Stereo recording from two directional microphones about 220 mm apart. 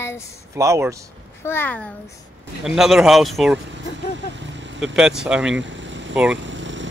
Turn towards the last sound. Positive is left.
turn(degrees=-55)  # may be behind; listen again after turning